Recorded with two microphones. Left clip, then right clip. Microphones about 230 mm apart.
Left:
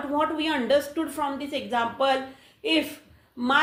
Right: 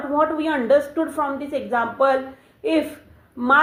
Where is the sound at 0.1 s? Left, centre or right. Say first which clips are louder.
Right 5 dB; left.